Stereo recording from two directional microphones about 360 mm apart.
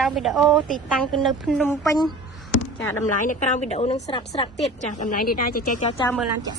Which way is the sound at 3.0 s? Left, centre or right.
Left.